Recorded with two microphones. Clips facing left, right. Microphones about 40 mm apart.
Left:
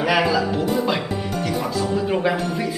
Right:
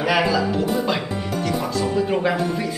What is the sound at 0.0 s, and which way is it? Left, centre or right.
Speech, centre.